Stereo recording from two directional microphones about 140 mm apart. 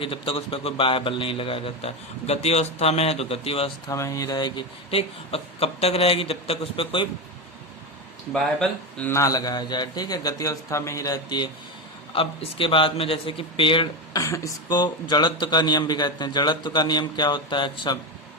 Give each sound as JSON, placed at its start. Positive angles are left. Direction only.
{"t": 0.0, "sound": "a man's voice", "side_deg": 40}
{"t": 3.8, "sound": "a man's voice", "side_deg": 25}
{"t": 8.3, "sound": "speech", "side_deg": 5}
{"t": 9.1, "sound": "a man's voice", "side_deg": 25}
{"t": 12.1, "sound": "a man's voice", "side_deg": 40}
{"t": 14.2, "sound": "a man's voice", "side_deg": 20}